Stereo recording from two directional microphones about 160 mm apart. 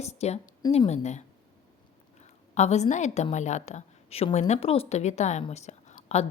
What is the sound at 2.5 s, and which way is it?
A woman's voice, 45° left (ahead or behind).